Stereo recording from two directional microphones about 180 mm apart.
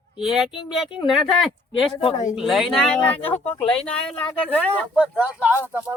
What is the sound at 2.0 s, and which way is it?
Speech, 40° left (ahead or behind).